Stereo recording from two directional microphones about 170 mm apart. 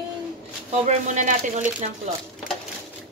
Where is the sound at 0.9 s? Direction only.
45° right (ahead or behind).